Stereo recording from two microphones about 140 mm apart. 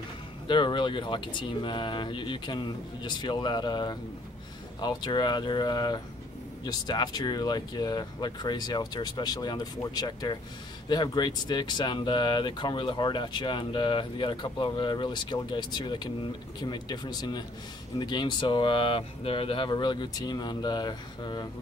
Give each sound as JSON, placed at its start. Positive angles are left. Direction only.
{"t": 0.5, "sound": "speech", "side_deg": 35}